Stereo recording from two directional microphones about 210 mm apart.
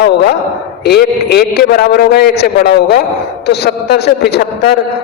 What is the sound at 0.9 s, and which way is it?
A man's voice, 50° left (ahead or behind).